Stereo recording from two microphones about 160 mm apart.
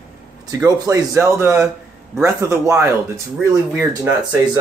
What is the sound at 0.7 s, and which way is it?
Speech, 20° right (ahead or behind).